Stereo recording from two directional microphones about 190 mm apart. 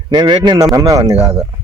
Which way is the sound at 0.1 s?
20° right (ahead or behind).